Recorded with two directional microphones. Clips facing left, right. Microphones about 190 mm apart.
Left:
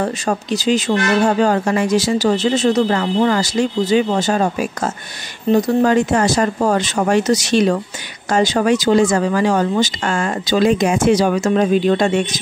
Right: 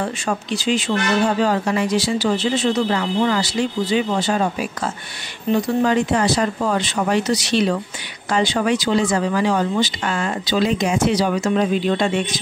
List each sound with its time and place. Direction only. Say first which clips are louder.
0.0 s speech: left 4 dB; 40° left (ahead or behind)